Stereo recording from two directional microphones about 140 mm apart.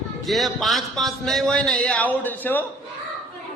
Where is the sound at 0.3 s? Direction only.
Centre (ahead or behind).